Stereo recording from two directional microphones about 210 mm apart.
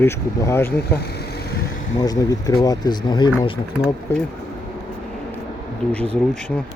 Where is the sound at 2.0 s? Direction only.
15° left (ahead or behind).